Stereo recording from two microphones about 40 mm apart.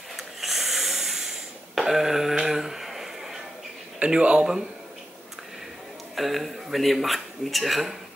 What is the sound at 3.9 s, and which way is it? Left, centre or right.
Speech, right.